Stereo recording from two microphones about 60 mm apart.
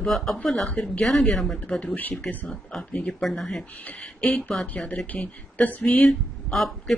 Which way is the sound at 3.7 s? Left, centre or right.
Left.